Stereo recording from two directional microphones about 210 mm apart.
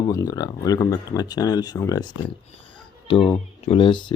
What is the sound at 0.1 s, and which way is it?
Speech, 20° left (ahead or behind).